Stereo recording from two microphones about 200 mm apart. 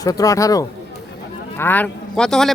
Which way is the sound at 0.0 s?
15° left (ahead or behind).